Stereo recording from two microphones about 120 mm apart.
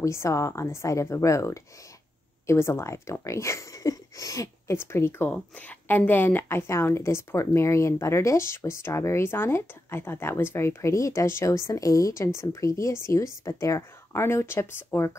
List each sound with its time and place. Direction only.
0.0 s a woman's voice: 25° left (ahead or behind)